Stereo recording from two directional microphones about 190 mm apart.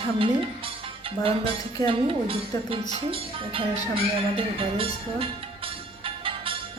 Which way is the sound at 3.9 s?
30° right (ahead or behind).